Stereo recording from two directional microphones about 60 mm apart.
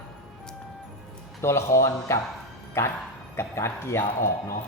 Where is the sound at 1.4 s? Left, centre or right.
Left.